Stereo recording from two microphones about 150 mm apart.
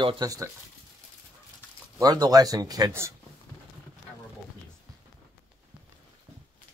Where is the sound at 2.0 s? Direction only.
25° right (ahead or behind).